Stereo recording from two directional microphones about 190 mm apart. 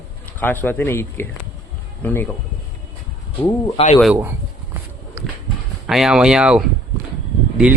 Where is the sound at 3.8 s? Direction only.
30° left (ahead or behind).